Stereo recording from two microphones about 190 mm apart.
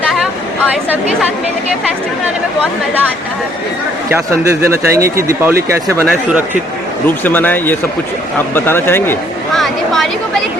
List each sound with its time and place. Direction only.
4.6 s speech: 15° right (ahead or behind)
7.3 s speech: 10° left (ahead or behind)
9.6 s speech: centre (ahead or behind)